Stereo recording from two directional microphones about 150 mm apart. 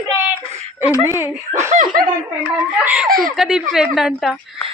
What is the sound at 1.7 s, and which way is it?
Speech, 60° right (ahead or behind).